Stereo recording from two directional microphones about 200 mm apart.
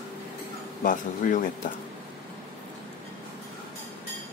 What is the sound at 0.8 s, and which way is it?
Speech, 40° left (ahead or behind).